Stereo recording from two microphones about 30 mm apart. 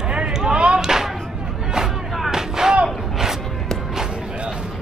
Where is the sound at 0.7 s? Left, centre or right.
Centre.